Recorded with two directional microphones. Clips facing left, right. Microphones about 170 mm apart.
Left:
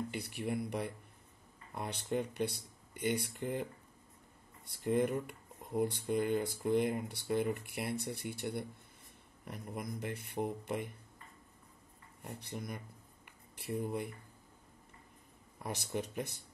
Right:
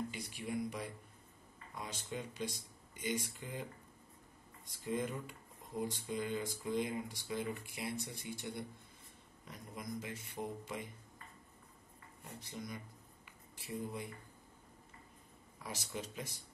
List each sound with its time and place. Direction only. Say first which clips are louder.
0.1 s speech: left 4 dB; 60° left (ahead or behind)
4.6 s speech: left 7 dB; 65° left (ahead or behind)
12.3 s speech: left 3 dB; 60° left (ahead or behind)
15.6 s speech: left 6 dB; 55° left (ahead or behind)